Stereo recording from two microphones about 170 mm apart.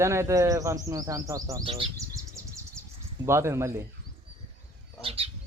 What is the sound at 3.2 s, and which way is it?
Speech, 15° right (ahead or behind).